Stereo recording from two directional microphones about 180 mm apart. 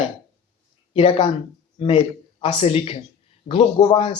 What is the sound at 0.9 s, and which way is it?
Speech, 30° left (ahead or behind).